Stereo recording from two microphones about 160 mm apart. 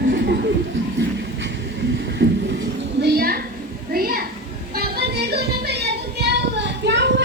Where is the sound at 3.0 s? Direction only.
85° right; by 4.2 s 65° right (ahead or behind).